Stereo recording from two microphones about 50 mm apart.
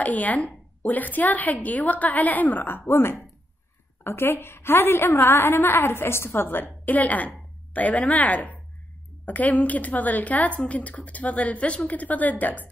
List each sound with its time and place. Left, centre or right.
0.0 s a woman's voice: left